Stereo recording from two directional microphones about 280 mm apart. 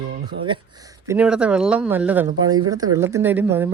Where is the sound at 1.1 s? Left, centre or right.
Centre.